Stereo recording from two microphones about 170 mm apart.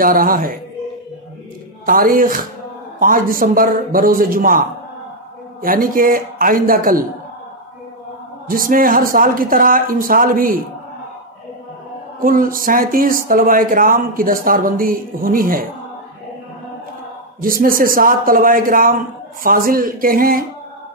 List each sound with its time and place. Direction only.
0.0 s speech: 55° right (ahead or behind)
1.9 s speech: 55° right (ahead or behind)
8.5 s speech: 55° right (ahead or behind)
12.2 s speech: 55° right (ahead or behind)
17.4 s speech: 55° right (ahead or behind)